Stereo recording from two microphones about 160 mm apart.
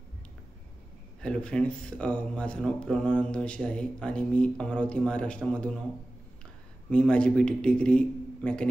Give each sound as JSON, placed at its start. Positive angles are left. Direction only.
{"t": 1.2, "sound": "speech", "side_deg": 5}
{"t": 6.9, "sound": "speech", "side_deg": 5}